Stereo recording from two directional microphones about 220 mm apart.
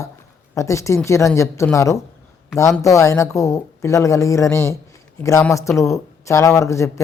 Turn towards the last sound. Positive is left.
turn(degrees=15)  # may be behind; listen again after turning